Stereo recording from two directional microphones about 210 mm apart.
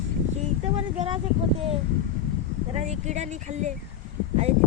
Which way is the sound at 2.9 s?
35° right (ahead or behind).